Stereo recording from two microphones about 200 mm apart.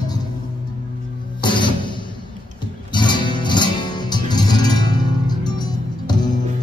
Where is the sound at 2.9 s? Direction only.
20° left (ahead or behind).